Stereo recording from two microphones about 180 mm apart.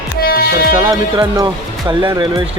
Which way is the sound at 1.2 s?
25° right (ahead or behind).